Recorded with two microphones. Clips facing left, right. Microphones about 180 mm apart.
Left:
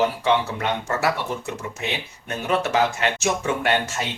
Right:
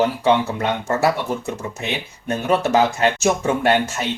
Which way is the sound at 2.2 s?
40° right (ahead or behind).